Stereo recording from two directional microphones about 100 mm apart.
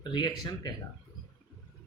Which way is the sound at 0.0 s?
50° left (ahead or behind).